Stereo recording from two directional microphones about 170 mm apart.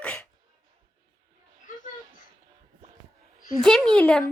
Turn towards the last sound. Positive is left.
turn(degrees=5)  # may be behind; listen again after turning